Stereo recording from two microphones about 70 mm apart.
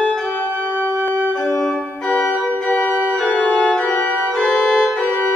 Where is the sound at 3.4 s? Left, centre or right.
Centre.